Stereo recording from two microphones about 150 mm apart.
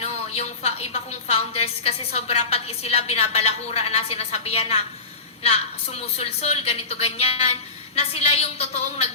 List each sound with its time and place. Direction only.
0.0 s a woman's voice: 45° left (ahead or behind)